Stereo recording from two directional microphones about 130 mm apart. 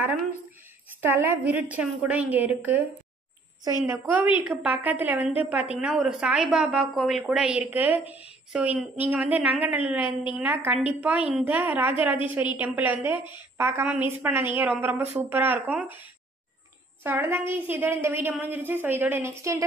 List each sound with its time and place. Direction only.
1.0 s a woman's voice: 15° right (ahead or behind)
17.0 s a woman's voice: 15° right (ahead or behind)